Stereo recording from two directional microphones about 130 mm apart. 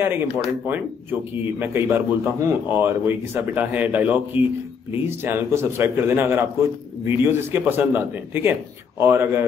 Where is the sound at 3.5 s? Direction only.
10° right (ahead or behind).